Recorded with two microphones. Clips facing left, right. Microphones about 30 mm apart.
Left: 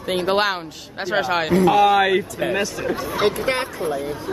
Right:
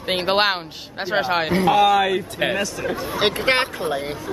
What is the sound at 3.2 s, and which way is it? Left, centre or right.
Speech, right.